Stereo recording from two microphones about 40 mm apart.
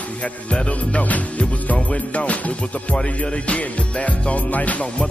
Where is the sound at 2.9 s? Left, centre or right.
Left.